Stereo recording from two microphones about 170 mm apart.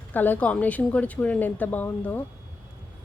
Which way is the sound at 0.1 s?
10° left (ahead or behind).